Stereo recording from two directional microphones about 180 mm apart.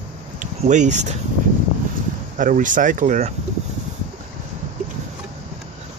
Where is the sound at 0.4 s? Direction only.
45° right (ahead or behind).